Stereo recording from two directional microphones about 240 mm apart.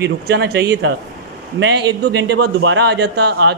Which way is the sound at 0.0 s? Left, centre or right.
Right.